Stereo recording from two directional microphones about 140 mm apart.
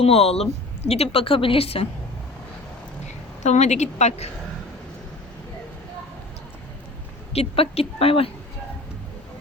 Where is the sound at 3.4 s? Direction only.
55° left (ahead or behind).